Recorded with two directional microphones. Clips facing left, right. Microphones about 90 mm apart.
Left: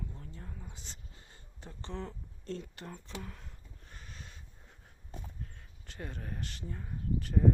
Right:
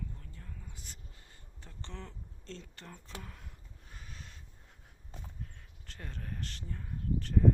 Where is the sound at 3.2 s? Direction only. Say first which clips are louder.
Left 4 dB; centre (ahead or behind).